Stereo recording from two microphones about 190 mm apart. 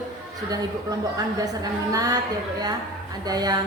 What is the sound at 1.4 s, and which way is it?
Speech, 20° right (ahead or behind).